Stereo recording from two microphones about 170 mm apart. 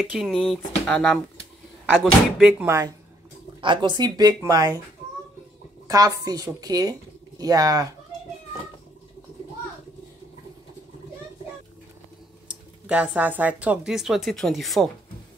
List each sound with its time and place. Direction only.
0.0 s speech: centre (ahead or behind)
2.3 s speech: 10° right (ahead or behind)
3.6 s speech: 25° right (ahead or behind)
5.9 s speech: 20° right (ahead or behind)
12.4 s speech: 5° right (ahead or behind)